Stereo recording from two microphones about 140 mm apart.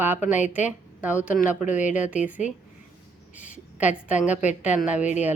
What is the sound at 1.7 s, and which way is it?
Speech, 60° left (ahead or behind).